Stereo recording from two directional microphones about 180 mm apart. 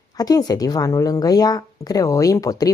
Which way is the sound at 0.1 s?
20° left (ahead or behind).